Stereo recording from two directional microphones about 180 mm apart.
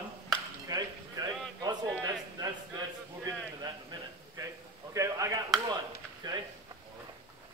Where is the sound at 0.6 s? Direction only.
20° right (ahead or behind).